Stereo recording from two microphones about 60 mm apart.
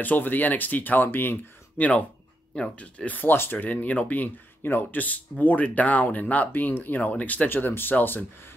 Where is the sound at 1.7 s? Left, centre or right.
Left.